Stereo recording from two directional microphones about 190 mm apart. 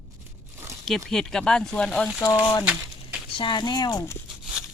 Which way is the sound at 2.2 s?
20° left (ahead or behind).